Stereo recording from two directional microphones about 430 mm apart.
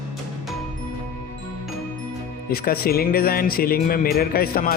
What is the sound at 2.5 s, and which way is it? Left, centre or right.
Speech, left.